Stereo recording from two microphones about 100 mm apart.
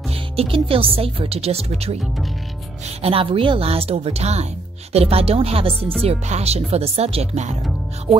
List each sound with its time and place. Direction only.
0.1 s a woman's voice: 70° right (ahead or behind); by 2.0 s 90° right
3.0 s a woman's voice: 70° right (ahead or behind); by 4.5 s 90° right
4.9 s speech: 75° right (ahead or behind)
6.0 s speech: 90° right
8.1 s speech: centre (ahead or behind)